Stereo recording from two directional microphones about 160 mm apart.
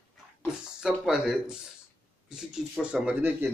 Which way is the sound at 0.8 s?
5° right (ahead or behind).